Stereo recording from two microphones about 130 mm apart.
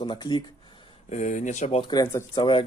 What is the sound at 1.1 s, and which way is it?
Speech, 70° left (ahead or behind).